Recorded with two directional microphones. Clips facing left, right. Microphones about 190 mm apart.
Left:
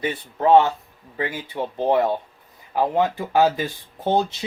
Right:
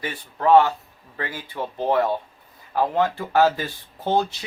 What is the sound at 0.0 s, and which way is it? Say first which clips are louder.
Speech: left 2 dB; 20° left (ahead or behind).